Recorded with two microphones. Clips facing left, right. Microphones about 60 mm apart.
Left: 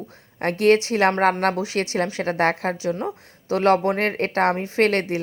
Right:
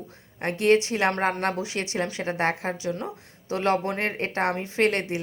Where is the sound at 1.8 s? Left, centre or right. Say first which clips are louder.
Left 5 dB; left.